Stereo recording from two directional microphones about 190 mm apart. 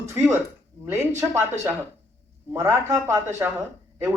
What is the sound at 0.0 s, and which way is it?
Speech, 15° right (ahead or behind).